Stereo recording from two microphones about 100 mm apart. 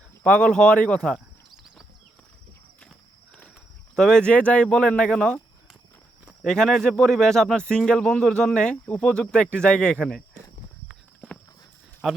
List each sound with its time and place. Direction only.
0.2 s speech: 10° left (ahead or behind)
3.9 s speech: 5° left (ahead or behind)
6.4 s speech: 5° left (ahead or behind)
11.2 s walk: 15° left (ahead or behind)
12.0 s speech: 5° right (ahead or behind)